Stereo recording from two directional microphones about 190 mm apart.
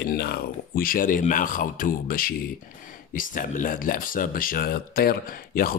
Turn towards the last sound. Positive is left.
turn(degrees=50)  # may be behind; listen again after turning